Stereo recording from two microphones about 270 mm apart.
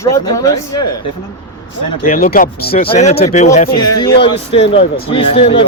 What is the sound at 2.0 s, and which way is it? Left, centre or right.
Speech, left.